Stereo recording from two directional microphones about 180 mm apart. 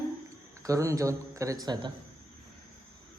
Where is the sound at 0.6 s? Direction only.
15° right (ahead or behind).